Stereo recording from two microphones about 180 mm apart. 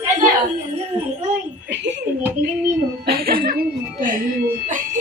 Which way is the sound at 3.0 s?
55° right (ahead or behind).